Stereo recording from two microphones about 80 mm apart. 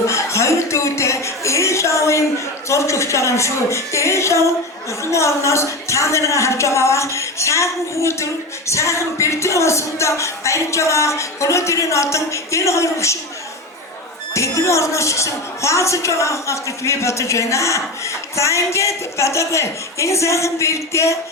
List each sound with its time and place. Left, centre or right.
0.1 s a sound: left
2.6 s a woman's voice: left
14.3 s a woman's voice: left